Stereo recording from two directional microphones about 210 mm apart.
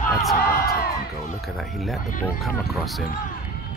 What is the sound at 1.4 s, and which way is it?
Speech, centre (ahead or behind).